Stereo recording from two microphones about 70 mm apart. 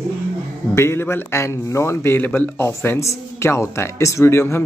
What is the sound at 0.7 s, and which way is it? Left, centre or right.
Speech, left.